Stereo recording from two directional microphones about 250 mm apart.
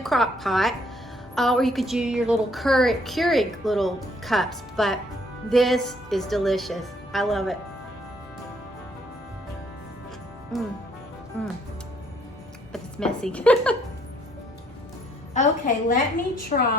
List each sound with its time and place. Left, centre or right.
0.0 s a woman's voice: centre
10.5 s a woman's voice: centre
12.7 s a woman's voice: centre
15.3 s a woman's voice: left